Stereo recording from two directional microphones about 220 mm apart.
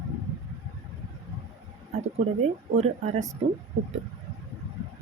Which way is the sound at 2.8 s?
35° right (ahead or behind).